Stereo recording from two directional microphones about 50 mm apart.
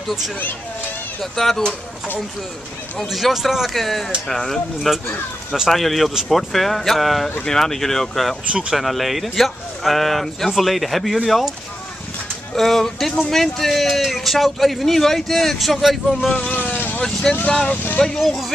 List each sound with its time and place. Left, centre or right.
1.2 s speech: centre
3.1 s a man's voice: centre
8.5 s speech: centre
8.7 s a man's voice: centre
12.5 s a man's voice: centre
16.3 s vehicle: left
17.0 s speech: centre